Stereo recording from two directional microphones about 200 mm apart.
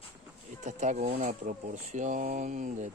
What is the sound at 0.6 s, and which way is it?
Speech, 35° right (ahead or behind).